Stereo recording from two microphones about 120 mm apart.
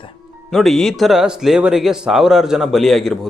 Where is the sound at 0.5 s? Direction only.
5° left (ahead or behind).